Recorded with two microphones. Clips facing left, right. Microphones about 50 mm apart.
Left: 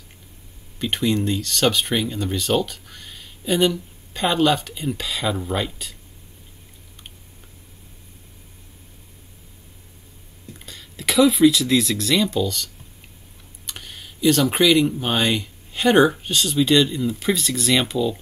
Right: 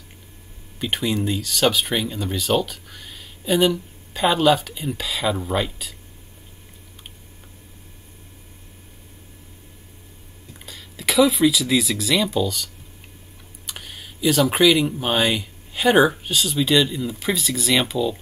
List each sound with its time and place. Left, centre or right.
0.7 s speech: centre
10.6 s speech: centre